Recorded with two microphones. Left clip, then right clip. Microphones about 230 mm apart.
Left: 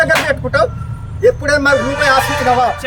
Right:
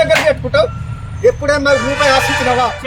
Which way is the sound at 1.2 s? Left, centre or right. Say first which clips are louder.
Even; centre.